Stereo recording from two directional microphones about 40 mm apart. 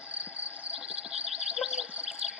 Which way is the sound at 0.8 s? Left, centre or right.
Right.